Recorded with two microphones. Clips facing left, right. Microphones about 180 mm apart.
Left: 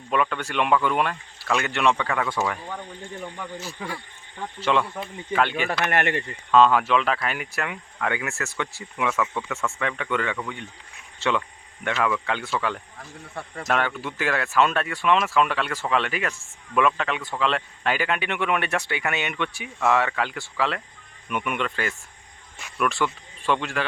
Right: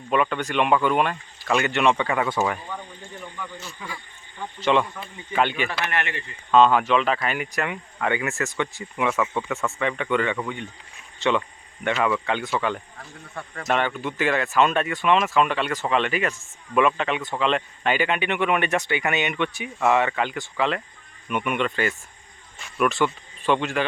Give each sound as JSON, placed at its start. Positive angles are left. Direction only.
{"t": 0.1, "sound": "speech", "side_deg": 0}
{"t": 2.2, "sound": "speech", "side_deg": -15}
{"t": 3.3, "sound": "speech", "side_deg": 40}
{"t": 3.8, "sound": "speech", "side_deg": 65}
{"t": 4.7, "sound": "speech", "side_deg": 0}
{"t": 5.8, "sound": "speech", "side_deg": 45}
{"t": 6.5, "sound": "speech", "side_deg": 0}
{"t": 9.6, "sound": "speech", "side_deg": -15}
{"t": 9.8, "sound": "speech", "side_deg": 0}